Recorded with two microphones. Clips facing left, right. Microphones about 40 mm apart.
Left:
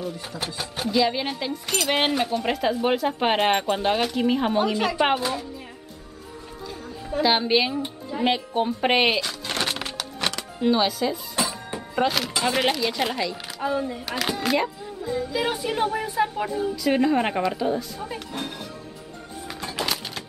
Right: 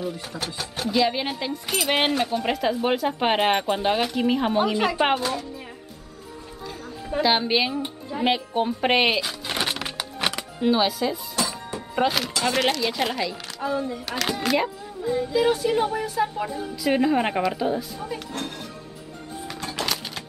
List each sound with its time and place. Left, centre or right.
0.8 s speech: centre
7.2 s speech: centre
9.3 s a sound: centre
9.8 s music: centre
11.4 s music: left
11.9 s speech: centre
13.6 s a child's voice: centre
15.3 s speech: centre
16.4 s speech: centre
18.0 s speech: centre
19.4 s a sound: centre